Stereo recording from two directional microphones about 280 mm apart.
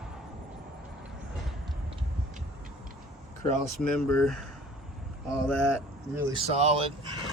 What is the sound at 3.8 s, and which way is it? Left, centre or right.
Speech, centre.